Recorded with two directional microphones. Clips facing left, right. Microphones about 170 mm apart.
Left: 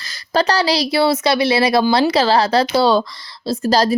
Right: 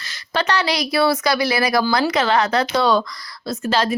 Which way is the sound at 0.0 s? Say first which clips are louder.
Left 5 dB; 35° left (ahead or behind).